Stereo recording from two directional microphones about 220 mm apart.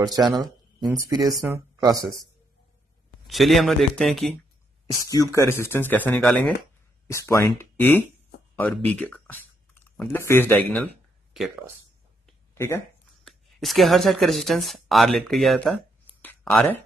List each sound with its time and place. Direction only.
0.0 s speech: 20° right (ahead or behind)
3.3 s a man's voice: centre (ahead or behind)
5.1 s speech: 15° left (ahead or behind)
13.2 s a woman's voice: centre (ahead or behind)
16.2 s a sound: 5° left (ahead or behind)